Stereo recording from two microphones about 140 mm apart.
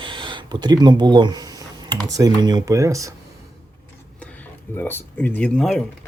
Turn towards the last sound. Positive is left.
turn(degrees=5)  # may be behind; listen again after turning